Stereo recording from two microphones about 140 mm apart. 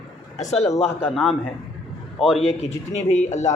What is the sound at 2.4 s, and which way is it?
A man's voice, 50° left (ahead or behind).